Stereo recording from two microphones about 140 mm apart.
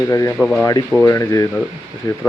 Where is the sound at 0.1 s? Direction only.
20° left (ahead or behind).